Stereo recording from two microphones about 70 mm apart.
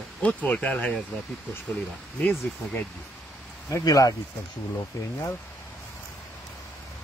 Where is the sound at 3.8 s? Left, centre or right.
Left.